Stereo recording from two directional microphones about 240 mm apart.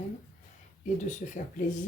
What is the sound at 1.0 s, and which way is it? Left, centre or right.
Speech, left.